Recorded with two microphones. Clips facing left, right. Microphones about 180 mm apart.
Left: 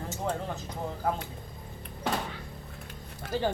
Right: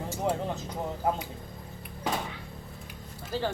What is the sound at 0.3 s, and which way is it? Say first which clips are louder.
Speech: right 3 dB; 15° right (ahead or behind).